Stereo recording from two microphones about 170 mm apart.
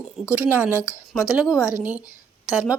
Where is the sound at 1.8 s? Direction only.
10° right (ahead or behind).